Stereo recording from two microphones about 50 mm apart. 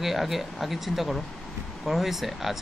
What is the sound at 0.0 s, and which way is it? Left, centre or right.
Speech, centre.